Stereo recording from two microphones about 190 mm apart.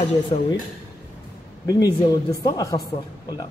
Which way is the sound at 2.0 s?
20° left (ahead or behind).